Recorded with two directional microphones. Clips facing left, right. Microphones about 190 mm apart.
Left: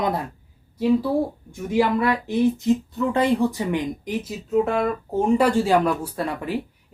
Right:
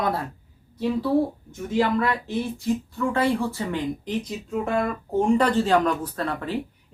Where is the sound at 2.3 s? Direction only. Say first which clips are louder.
Left 6 dB; 20° left (ahead or behind).